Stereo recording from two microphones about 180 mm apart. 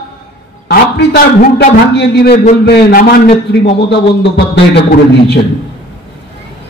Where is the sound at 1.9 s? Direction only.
70° left (ahead or behind).